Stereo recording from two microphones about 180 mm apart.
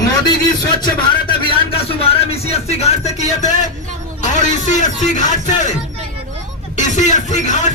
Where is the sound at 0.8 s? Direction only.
25° left (ahead or behind).